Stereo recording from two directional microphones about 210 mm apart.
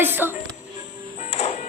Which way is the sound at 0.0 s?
10° right (ahead or behind).